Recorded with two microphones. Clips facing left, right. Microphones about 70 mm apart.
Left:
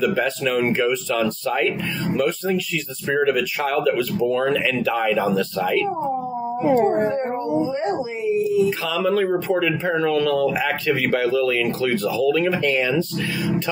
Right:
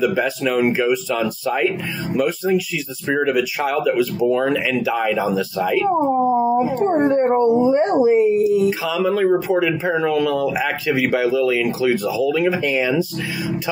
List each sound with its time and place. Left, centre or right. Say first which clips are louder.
0.0 s speech: right 2 dB; centre
5.9 s a sound: right 7 dB; right
6.9 s speech: right 5 dB; right
8.6 s speech: right 2 dB; centre